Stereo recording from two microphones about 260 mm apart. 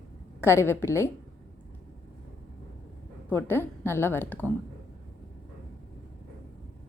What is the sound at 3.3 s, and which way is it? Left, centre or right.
A woman's voice, centre.